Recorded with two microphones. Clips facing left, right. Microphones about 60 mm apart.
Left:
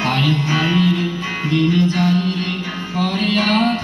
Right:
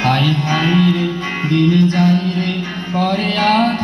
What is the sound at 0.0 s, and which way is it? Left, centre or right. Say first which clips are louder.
Music: right 2 dB; right.